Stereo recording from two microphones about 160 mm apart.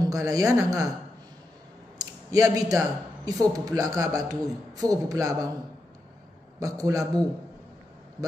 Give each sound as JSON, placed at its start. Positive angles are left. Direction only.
{"t": 0.0, "sound": "a man's voice", "side_deg": -20}
{"t": 2.0, "sound": "a sound", "side_deg": -20}
{"t": 3.3, "sound": "a man's voice", "side_deg": -20}
{"t": 6.6, "sound": "a man's voice", "side_deg": -20}